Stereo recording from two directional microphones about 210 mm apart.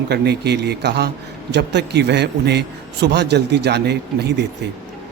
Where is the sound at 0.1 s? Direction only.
50° right (ahead or behind).